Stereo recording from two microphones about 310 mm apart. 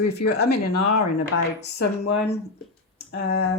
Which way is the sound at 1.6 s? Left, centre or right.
Left.